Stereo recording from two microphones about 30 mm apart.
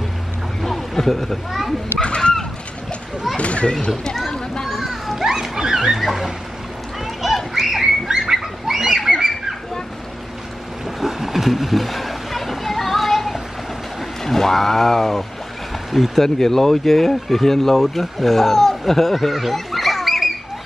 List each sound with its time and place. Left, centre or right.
0.6 s a sound: centre
2.0 s goose: left
3.3 s a child's voice: left
4.6 s children playing: centre
5.5 s speech: centre
7.2 s a sound: centre
8.1 s bird: centre
11.0 s splash: centre
14.2 s speech: centre
19.1 s a sound: centre